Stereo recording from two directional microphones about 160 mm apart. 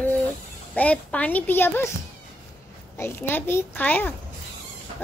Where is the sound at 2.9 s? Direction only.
15° left (ahead or behind).